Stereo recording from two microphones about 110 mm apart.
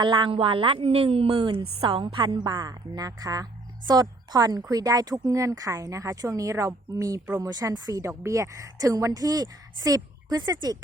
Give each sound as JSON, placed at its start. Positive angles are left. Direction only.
{"t": 0.0, "sound": "a woman's voice", "side_deg": -45}
{"t": 0.8, "sound": "a woman's voice", "side_deg": -65}